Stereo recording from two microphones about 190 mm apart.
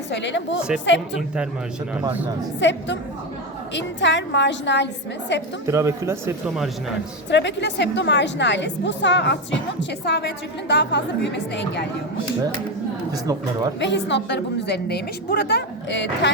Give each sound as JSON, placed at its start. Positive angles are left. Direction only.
{"t": 0.1, "sound": "a woman's voice", "side_deg": 70}
{"t": 2.6, "sound": "a woman's voice", "side_deg": 70}
{"t": 5.6, "sound": "speech", "side_deg": -15}
{"t": 7.3, "sound": "a woman's voice", "side_deg": 65}
{"t": 13.7, "sound": "a woman's voice", "side_deg": 70}